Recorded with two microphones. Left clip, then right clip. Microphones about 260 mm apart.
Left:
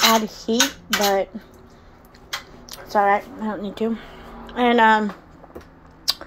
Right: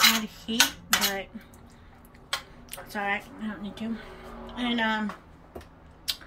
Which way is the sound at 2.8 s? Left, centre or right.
Centre.